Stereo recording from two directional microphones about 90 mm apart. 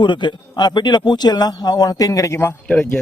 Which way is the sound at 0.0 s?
60° left (ahead or behind).